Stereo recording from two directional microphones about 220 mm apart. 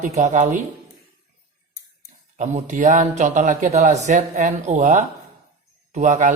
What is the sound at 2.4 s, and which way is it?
A man's voice, 35° right (ahead or behind).